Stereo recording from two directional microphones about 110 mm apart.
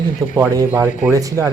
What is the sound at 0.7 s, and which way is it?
Speech, 15° right (ahead or behind).